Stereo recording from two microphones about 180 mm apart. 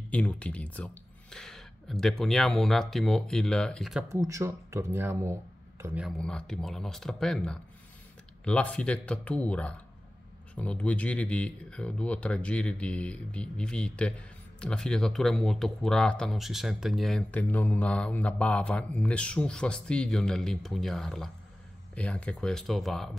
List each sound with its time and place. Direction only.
0.1 s speech: 5° left (ahead or behind)
4.1 s speech: 15° right (ahead or behind)
6.0 s speech: 5° left (ahead or behind)